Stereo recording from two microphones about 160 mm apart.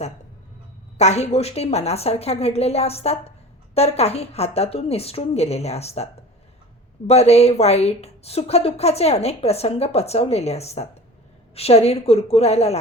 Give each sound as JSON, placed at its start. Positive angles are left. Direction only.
{"t": 0.9, "sound": "a woman's voice", "side_deg": 45}
{"t": 7.1, "sound": "a woman's voice", "side_deg": 40}